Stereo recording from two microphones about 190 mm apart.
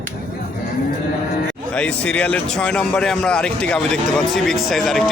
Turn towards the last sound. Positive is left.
turn(degrees=0)  # may be behind; listen again after turning